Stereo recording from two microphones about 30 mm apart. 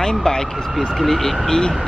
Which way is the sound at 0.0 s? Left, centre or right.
Left.